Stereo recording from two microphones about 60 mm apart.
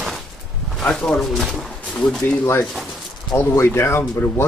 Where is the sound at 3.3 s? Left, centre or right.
Left.